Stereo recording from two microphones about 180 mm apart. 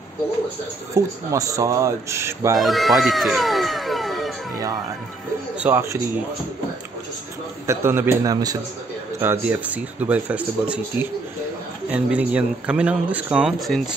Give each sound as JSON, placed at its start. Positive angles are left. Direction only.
{"t": 0.9, "sound": "speech", "side_deg": -15}
{"t": 2.6, "sound": "speech", "side_deg": 0}
{"t": 5.6, "sound": "speech", "side_deg": -10}
{"t": 7.6, "sound": "speech", "side_deg": -15}
{"t": 9.2, "sound": "speech", "side_deg": -10}